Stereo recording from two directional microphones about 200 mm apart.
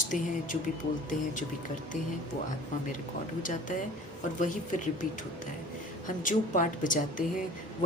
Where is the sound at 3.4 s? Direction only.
40° left (ahead or behind).